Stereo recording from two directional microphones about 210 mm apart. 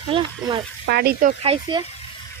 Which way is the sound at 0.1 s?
20° right (ahead or behind).